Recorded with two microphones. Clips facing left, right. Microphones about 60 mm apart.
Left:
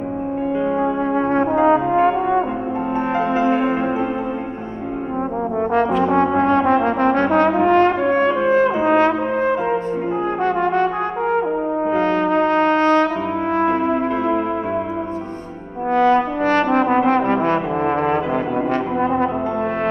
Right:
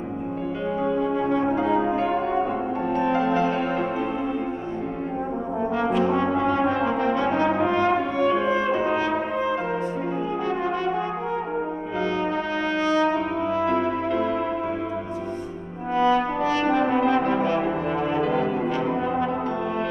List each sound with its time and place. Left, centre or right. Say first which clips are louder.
0.9 s brass instrument: left 5 dB; left
3.0 s music: left 2 dB; left
5.6 s trombone: left 8 dB; left
6.1 s brass instrument: left 6 dB; left
14.1 s music: left 5 dB; left
15.9 s brass instrument: left 5 dB; left